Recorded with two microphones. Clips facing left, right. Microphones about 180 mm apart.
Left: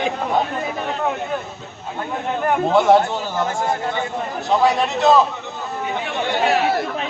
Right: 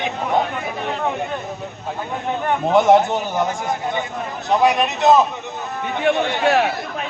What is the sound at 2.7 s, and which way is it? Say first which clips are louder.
A man's voice: right 2 dB; 20° right (ahead or behind).